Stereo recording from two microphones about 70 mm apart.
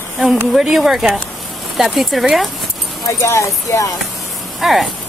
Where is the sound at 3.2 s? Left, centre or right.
Left.